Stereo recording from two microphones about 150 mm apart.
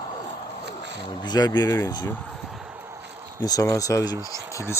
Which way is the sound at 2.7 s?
20° right (ahead or behind).